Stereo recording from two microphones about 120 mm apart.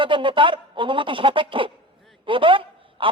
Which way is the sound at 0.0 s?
45° right (ahead or behind).